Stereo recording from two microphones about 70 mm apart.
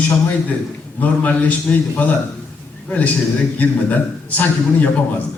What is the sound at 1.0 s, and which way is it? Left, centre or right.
Speech, left.